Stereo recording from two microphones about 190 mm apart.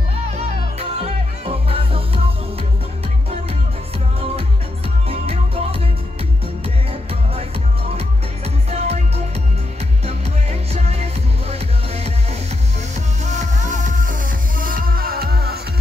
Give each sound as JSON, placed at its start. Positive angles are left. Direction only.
{"t": 0.3, "sound": "music", "side_deg": -35}
{"t": 5.0, "sound": "music", "side_deg": -30}
{"t": 6.9, "sound": "music", "side_deg": -30}
{"t": 8.6, "sound": "music", "side_deg": -35}